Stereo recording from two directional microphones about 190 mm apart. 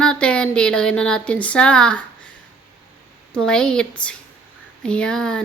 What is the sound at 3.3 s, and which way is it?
Speech, 5° left (ahead or behind).